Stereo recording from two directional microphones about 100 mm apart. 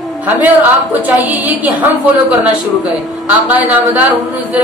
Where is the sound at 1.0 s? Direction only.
15° right (ahead or behind).